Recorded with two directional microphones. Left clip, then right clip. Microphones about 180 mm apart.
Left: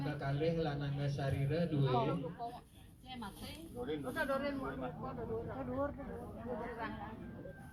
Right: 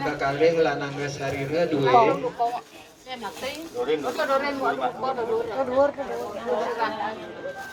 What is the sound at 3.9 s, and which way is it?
Speech, 55° right (ahead or behind).